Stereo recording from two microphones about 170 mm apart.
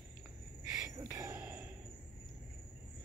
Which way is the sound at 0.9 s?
20° right (ahead or behind).